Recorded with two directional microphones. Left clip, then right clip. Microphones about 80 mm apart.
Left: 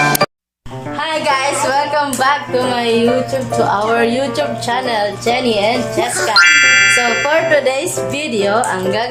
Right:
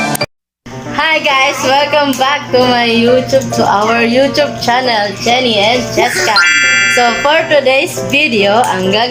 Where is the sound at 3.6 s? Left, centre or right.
Centre.